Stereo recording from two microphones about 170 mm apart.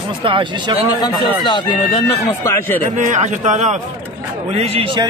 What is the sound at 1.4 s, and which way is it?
Speech, 25° left (ahead or behind).